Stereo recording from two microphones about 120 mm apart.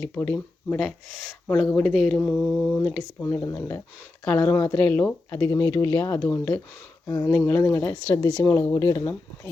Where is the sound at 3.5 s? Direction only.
20° left (ahead or behind).